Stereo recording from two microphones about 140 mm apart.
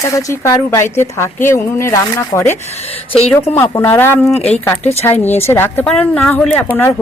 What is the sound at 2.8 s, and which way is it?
Speech, 45° left (ahead or behind).